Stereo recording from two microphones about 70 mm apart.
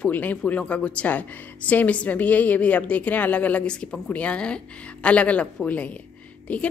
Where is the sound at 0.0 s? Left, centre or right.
Left.